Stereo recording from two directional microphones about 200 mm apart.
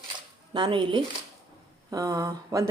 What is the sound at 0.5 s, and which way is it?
Speech, 25° right (ahead or behind).